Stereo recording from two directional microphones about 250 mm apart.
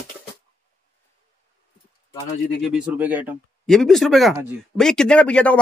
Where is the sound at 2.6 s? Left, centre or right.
Centre.